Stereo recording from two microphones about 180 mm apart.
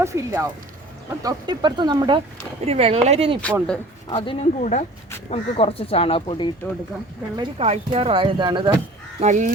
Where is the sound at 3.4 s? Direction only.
5° left (ahead or behind).